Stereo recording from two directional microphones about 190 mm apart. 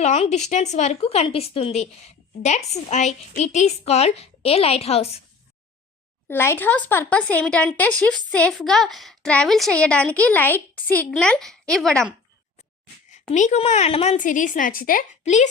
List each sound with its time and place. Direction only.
0.0 s a woman's voice: 35° left (ahead or behind)
6.2 s a woman's voice: 10° left (ahead or behind)
13.3 s a woman's voice: 40° left (ahead or behind)